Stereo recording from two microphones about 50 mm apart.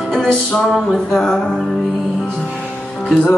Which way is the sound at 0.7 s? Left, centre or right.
Centre.